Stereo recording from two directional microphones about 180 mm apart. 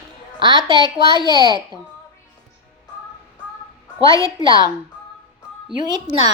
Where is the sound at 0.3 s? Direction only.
25° right (ahead or behind).